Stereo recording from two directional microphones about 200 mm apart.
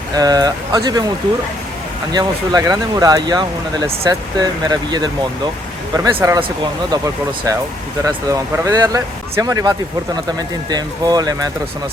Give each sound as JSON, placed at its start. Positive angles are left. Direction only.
{"t": 0.2, "sound": "speech", "side_deg": -20}
{"t": 2.1, "sound": "speech", "side_deg": -20}
{"t": 6.1, "sound": "speech", "side_deg": -15}